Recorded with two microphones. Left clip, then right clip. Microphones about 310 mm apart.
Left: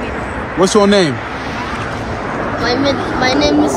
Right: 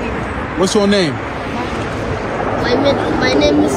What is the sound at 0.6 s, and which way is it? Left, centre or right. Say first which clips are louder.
Speech: left 3 dB; left.